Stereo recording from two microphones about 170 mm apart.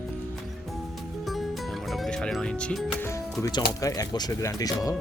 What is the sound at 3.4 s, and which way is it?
Speech, 25° left (ahead or behind).